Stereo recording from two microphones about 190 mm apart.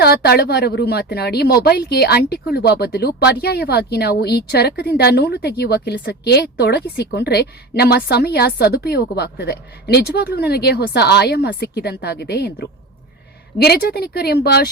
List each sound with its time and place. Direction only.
0.0 s speech: 55° left (ahead or behind)